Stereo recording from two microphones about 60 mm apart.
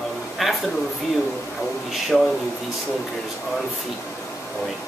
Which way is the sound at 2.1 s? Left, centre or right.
Centre.